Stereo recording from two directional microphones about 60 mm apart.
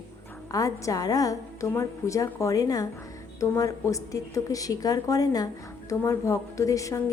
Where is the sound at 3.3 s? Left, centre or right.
Left.